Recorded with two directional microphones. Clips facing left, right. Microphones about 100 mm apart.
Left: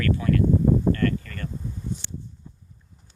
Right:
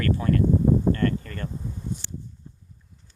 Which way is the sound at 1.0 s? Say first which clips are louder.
Even; 25° right (ahead or behind).